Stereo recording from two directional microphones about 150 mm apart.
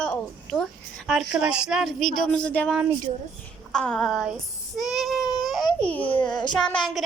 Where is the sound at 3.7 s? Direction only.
5° left (ahead or behind).